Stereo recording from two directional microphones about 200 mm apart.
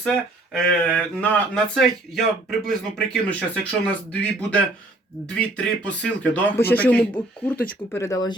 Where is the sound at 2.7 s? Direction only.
5° left (ahead or behind).